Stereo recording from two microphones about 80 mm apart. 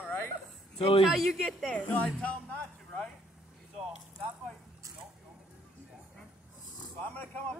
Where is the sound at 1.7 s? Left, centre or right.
Centre.